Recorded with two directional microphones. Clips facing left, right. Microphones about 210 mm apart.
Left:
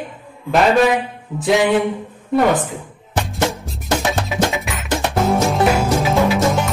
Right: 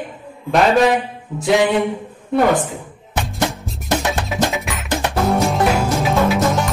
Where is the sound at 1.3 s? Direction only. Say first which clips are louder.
Even; centre (ahead or behind).